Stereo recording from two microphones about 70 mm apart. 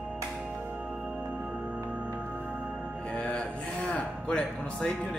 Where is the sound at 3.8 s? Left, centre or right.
Centre.